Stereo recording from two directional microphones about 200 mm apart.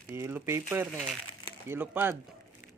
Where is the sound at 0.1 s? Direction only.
10° right (ahead or behind).